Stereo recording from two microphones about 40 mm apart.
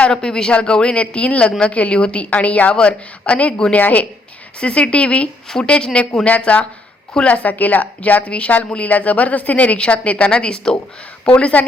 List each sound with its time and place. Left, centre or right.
0.1 s a woman's voice: centre
2.3 s a woman's voice: left
4.6 s a woman's voice: left
6.2 s a woman's voice: left
11.5 s a woman's voice: left